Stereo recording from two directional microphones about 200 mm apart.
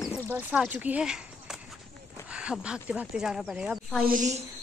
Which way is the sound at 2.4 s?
5° right (ahead or behind).